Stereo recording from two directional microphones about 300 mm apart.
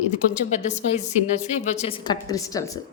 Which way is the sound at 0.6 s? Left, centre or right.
Left.